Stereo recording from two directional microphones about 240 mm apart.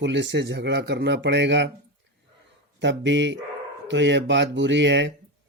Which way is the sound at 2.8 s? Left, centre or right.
Right.